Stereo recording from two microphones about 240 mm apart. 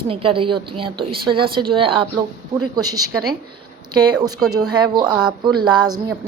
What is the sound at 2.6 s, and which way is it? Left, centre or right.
Speech, right.